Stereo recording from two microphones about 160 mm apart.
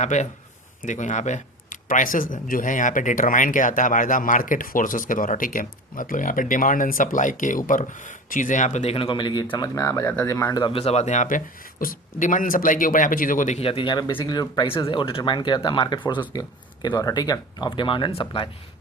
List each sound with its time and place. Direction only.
0.0 s speech: 45° left (ahead or behind); by 10.6 s 20° left (ahead or behind)
10.6 s speech: 35° left (ahead or behind); by 13.6 s 55° left (ahead or behind)
13.6 s speech: 35° left (ahead or behind)